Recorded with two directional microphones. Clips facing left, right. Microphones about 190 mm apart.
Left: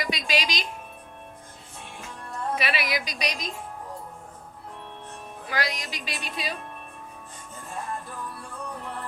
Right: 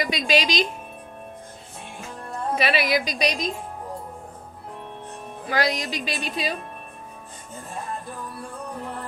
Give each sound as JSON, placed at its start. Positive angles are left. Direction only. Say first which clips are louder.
{"t": 0.0, "sound": "a woman's voice", "louder": "right 6 dB", "side_deg": -25}
{"t": 2.6, "sound": "a woman's voice", "louder": "right 9 dB", "side_deg": -30}
{"t": 5.5, "sound": "a woman's voice", "louder": "right 6 dB", "side_deg": -30}